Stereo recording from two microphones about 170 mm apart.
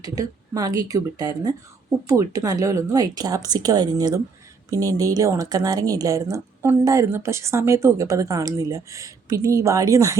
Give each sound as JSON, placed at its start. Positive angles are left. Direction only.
{"t": 0.0, "sound": "speech", "side_deg": -20}